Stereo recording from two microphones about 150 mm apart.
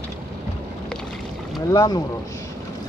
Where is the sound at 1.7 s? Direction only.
25° left (ahead or behind).